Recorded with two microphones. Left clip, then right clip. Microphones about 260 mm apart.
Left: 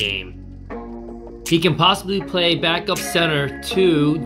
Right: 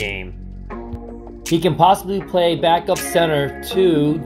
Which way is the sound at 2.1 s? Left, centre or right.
Centre.